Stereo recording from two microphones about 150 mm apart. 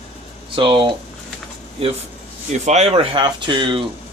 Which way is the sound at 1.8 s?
40° right (ahead or behind).